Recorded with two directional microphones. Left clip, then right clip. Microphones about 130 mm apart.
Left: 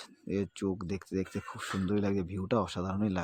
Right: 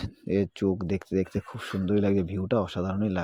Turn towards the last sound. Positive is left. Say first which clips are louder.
# right 4 dB
turn(degrees=-15)  # may be behind; listen again after turning